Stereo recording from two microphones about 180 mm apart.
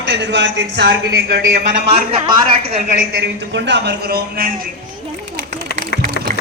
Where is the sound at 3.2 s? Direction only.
80° right; by 4.5 s 55° right (ahead or behind).